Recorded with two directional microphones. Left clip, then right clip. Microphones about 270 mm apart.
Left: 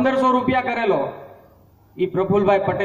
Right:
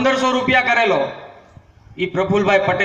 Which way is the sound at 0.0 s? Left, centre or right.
Right.